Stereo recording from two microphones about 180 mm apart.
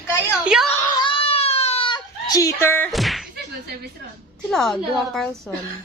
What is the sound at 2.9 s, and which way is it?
Slam, centre (ahead or behind).